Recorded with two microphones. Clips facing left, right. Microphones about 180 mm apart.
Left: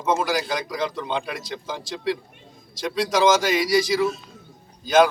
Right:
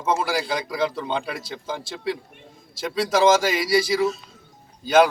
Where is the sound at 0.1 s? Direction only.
30° right (ahead or behind).